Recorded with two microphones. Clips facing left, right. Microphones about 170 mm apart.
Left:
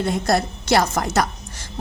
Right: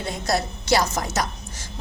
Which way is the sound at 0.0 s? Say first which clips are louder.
Left 5 dB; 60° left (ahead or behind).